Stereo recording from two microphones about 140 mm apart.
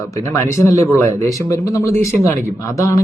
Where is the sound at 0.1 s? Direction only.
20° left (ahead or behind).